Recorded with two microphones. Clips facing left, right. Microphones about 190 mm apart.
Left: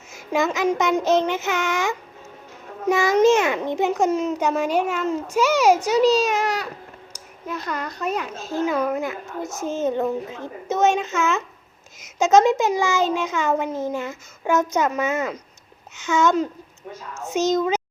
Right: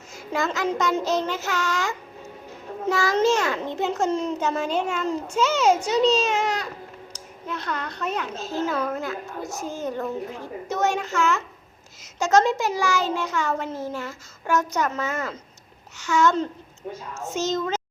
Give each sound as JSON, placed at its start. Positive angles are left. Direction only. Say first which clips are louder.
{"t": 0.1, "sound": "a child's voice", "louder": "left 4 dB", "side_deg": 20}
{"t": 7.4, "sound": "a child's voice", "louder": "left 2 dB", "side_deg": 5}